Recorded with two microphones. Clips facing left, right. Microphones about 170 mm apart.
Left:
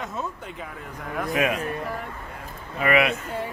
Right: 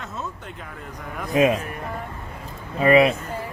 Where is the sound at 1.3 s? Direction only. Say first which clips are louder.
Right 6 dB; 25° right (ahead or behind).